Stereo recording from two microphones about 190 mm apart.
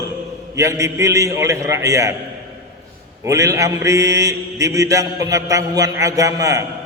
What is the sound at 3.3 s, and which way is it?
Mantra, 15° right (ahead or behind).